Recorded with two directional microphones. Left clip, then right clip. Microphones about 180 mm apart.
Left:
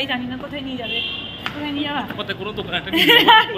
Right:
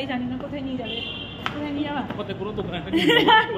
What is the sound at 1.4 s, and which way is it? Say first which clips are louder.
Speech: left 1 dB; 5° left (ahead or behind).